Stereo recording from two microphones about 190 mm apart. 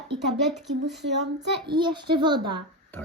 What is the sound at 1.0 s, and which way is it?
Speech, 65° right (ahead or behind).